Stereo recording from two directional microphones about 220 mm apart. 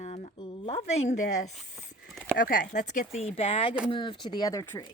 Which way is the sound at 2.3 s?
35° left (ahead or behind).